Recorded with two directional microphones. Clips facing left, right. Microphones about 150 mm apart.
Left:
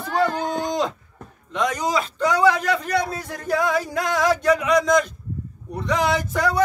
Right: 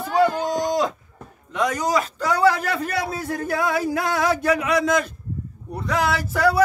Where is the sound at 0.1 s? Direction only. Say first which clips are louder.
Right 2 dB; 10° right (ahead or behind).